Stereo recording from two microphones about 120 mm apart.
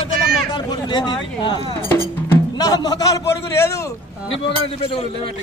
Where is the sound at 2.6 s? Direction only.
30° left (ahead or behind).